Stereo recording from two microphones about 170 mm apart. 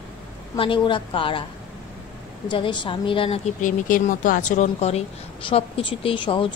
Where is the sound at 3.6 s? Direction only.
50° left (ahead or behind).